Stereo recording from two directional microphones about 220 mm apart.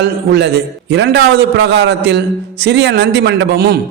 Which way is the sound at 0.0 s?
50° right (ahead or behind).